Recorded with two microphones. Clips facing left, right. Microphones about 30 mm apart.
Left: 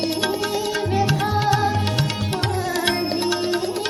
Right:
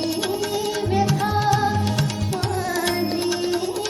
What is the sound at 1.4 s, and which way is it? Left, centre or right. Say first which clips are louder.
Music: even; left.